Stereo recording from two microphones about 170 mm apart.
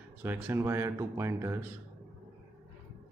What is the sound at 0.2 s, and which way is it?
Speech, 15° right (ahead or behind).